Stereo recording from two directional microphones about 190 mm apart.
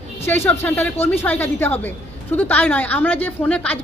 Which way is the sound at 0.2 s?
10° left (ahead or behind).